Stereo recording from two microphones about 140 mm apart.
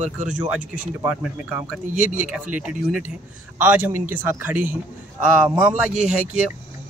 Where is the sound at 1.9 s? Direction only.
65° right (ahead or behind).